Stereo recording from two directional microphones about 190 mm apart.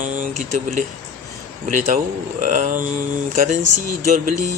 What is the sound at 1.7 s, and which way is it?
Speech, 40° right (ahead or behind).